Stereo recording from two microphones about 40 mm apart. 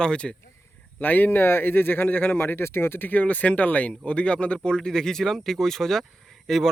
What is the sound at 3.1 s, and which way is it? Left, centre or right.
Speech, left.